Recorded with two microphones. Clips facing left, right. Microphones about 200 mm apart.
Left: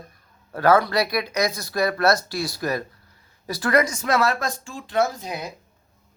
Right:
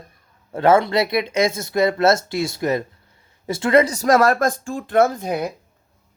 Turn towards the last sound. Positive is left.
turn(degrees=-55)  # may be behind; listen again after turning